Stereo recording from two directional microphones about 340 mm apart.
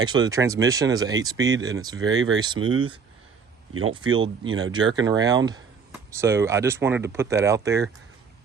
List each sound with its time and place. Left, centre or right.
0.0 s speech: centre
2.6 s speech: right
3.9 s speech: centre